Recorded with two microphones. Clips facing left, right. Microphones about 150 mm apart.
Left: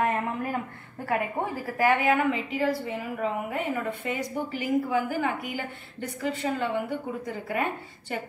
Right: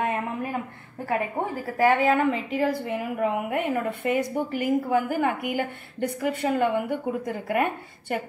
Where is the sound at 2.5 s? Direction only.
50° right (ahead or behind).